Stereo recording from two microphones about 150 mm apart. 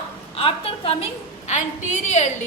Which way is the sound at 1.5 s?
50° left (ahead or behind).